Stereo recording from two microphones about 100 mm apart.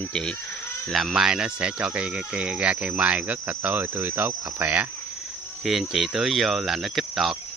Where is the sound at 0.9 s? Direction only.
5° right (ahead or behind).